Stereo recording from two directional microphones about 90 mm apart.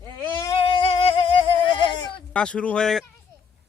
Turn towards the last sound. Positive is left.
turn(degrees=5)  # may be behind; listen again after turning